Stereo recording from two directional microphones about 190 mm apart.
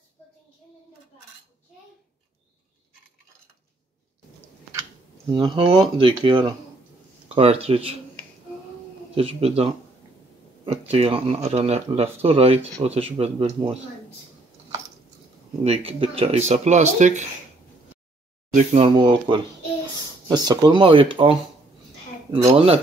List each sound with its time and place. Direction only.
5.3 s speech: 25° right (ahead or behind)
9.1 s speech: 30° right (ahead or behind)
10.9 s speech: 30° right (ahead or behind)
15.6 s speech: 30° right (ahead or behind)
18.5 s speech: 40° right (ahead or behind)
18.9 s speech: 25° right (ahead or behind)
22.5 s speech: 30° right (ahead or behind)